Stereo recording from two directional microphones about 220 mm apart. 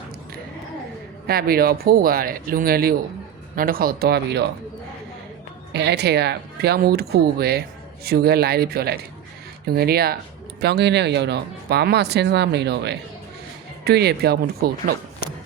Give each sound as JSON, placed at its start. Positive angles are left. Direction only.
{"t": 1.3, "sound": "speech", "side_deg": -45}
{"t": 5.7, "sound": "speech", "side_deg": -50}